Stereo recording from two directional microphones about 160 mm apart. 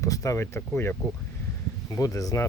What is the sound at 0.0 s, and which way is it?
Speech, 20° left (ahead or behind).